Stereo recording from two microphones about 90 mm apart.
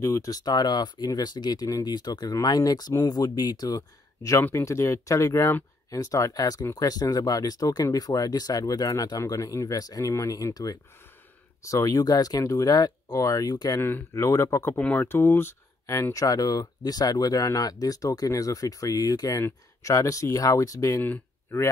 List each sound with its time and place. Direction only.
0.0 s speech: 35° left (ahead or behind)
4.4 s speech: 25° left (ahead or behind)
13.7 s speech: 25° left (ahead or behind)
14.8 s speech: 15° left (ahead or behind)
15.9 s speech: 40° left (ahead or behind)
21.0 s a sound: 20° left (ahead or behind)